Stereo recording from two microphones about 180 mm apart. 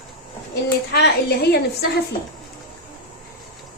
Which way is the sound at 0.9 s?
60° left (ahead or behind).